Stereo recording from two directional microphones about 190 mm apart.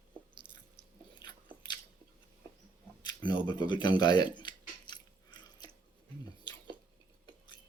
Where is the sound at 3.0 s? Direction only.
25° left (ahead or behind).